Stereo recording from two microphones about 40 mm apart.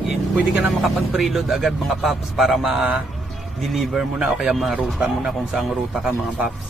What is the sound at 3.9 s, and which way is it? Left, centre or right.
Speech, centre.